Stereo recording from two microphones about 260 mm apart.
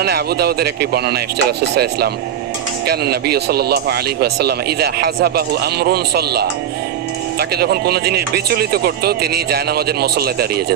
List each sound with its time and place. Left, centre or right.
0.0 s speech: right